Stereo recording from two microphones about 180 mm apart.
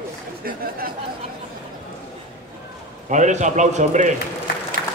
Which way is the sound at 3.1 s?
40° right (ahead or behind).